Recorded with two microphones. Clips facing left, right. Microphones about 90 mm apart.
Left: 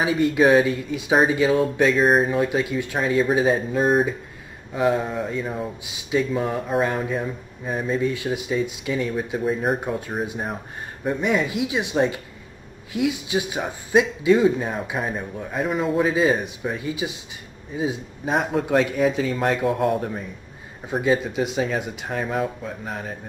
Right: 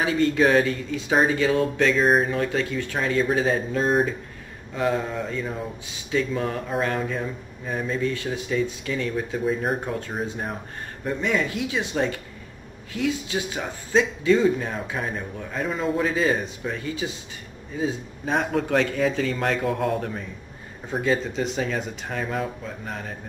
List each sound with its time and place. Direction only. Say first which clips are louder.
0.0 s a man's voice: left 2 dB; 15° left (ahead or behind)
2.0 s speech: left 2 dB; centre (ahead or behind)
2.3 s a man's voice: left 3 dB; 15° left (ahead or behind)
9.4 s a man's voice: left 2 dB; centre (ahead or behind)